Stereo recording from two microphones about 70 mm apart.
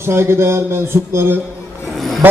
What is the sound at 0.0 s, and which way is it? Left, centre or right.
A man's voice, right.